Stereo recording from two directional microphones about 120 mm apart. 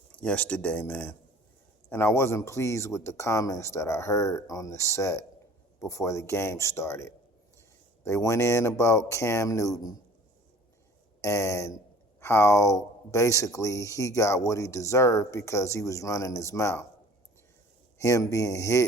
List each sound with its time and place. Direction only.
0.2 s speech: 10° left (ahead or behind); by 9.9 s 30° left (ahead or behind)
11.2 s speech: 25° left (ahead or behind)
17.9 s speech: 25° left (ahead or behind)